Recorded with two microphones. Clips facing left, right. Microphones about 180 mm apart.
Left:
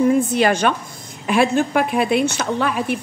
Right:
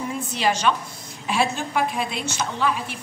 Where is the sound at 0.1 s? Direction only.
55° left (ahead or behind).